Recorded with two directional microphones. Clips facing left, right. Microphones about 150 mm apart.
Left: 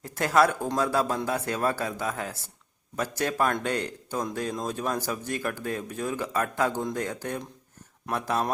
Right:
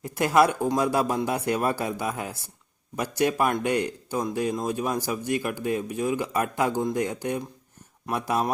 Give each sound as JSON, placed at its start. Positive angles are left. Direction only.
{"t": 0.0, "sound": "speech", "side_deg": -15}